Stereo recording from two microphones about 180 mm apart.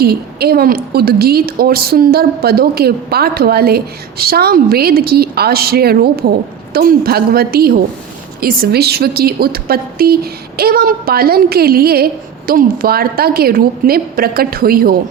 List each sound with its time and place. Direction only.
0.0 s a woman's voice: 60° right (ahead or behind)